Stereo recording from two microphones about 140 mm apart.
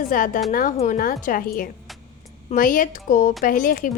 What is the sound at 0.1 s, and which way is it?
A woman's voice, 70° left (ahead or behind).